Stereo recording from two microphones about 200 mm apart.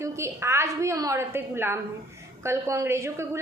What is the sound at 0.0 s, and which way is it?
A woman's voice, 15° right (ahead or behind).